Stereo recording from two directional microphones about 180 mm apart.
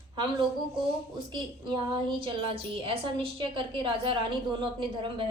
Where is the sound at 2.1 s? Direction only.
30° right (ahead or behind).